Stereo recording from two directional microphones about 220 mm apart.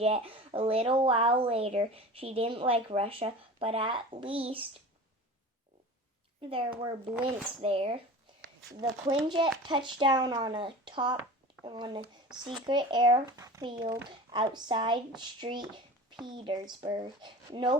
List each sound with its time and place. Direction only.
0.0 s speech: 25° right (ahead or behind)
6.4 s speech: 25° right (ahead or behind)